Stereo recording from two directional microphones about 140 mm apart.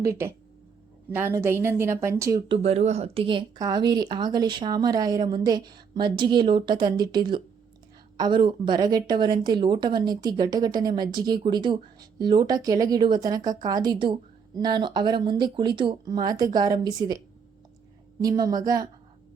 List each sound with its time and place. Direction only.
0.0 s a woman's voice: 20° right (ahead or behind)
2.5 s a woman's voice: 50° right (ahead or behind); by 17.2 s 30° right (ahead or behind)
18.2 s a woman's voice: 25° right (ahead or behind)